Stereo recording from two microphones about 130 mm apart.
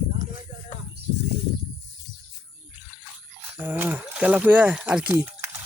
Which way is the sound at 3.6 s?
15° right (ahead or behind).